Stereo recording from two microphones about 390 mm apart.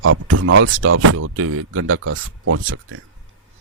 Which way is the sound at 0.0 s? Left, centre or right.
Right.